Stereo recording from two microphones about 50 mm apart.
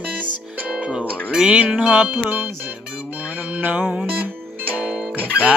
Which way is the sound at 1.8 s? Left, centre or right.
Right.